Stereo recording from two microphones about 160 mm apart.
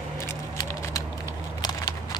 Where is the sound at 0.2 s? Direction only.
20° left (ahead or behind).